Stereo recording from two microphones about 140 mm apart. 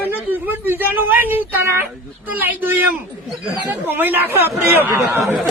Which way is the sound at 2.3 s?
15° right (ahead or behind).